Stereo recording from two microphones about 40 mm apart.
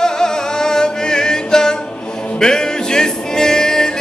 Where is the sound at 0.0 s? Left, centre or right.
Centre.